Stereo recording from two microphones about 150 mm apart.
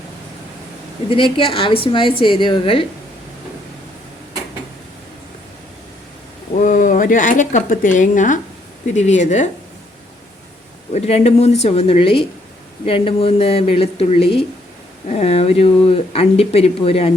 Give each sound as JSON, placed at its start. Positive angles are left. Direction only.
{"t": 1.1, "sound": "a woman's voice", "side_deg": 35}
{"t": 6.6, "sound": "speech", "side_deg": 60}
{"t": 10.9, "sound": "a woman's voice", "side_deg": 45}